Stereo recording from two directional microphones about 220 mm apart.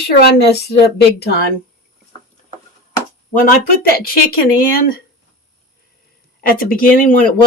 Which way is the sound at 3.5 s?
45° left (ahead or behind).